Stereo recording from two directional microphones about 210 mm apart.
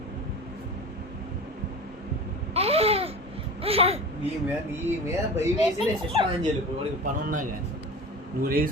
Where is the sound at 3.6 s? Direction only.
30° right (ahead or behind).